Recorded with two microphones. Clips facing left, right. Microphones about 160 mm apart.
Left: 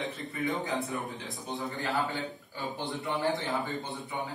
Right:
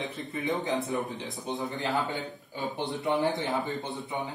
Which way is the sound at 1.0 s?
Centre (ahead or behind).